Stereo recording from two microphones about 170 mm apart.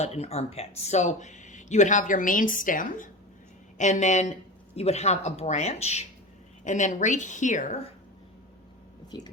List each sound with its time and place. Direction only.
0.0 s speech: 40° left (ahead or behind)
9.1 s speech: 25° left (ahead or behind)